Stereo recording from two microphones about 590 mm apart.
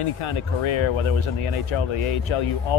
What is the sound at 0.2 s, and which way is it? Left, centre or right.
Speech, left.